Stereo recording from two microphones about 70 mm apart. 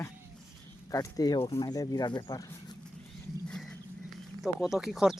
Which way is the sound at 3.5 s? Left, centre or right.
Centre.